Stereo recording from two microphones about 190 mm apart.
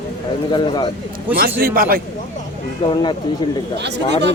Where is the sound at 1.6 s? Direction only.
50° right (ahead or behind).